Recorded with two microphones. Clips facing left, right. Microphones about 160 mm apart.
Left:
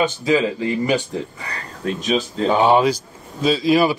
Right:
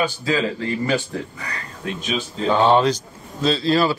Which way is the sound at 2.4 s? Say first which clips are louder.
Even; 10° left (ahead or behind).